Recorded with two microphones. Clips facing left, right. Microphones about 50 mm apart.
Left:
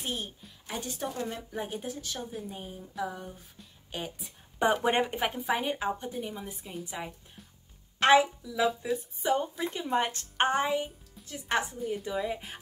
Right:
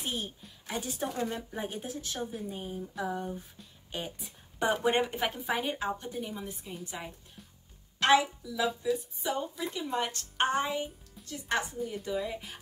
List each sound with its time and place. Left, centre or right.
0.0 s a woman's voice: centre
5.4 s a woman's voice: centre
8.0 s a woman's voice: left
8.8 s speech: left
10.5 s speech: centre
11.2 s speech: centre